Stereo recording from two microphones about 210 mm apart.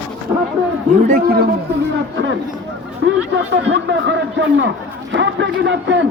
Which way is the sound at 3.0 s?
60° right (ahead or behind).